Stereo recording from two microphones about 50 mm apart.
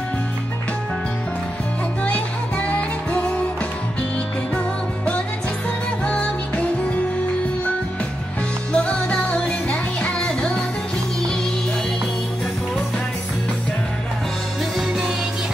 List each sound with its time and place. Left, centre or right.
2.0 s music: left
6.0 s music: left
8.7 s music: left